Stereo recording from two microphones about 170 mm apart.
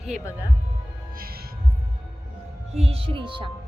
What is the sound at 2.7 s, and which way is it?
Speech, 35° right (ahead or behind).